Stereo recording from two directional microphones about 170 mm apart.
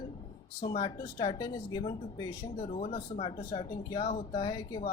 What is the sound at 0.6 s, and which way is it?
Speech, 25° left (ahead or behind).